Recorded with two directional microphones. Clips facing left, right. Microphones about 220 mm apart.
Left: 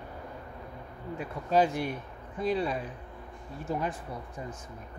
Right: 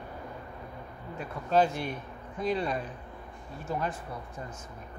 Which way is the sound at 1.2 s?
15° left (ahead or behind).